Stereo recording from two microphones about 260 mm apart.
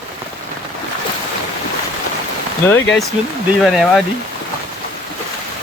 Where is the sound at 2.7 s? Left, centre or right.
Centre.